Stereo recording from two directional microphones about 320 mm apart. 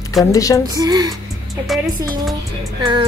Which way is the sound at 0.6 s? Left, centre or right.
Centre.